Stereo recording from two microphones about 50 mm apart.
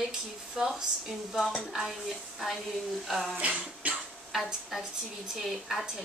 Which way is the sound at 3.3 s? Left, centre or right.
Right.